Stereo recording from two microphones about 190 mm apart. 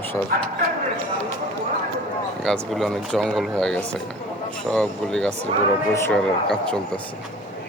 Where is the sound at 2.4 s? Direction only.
Centre (ahead or behind).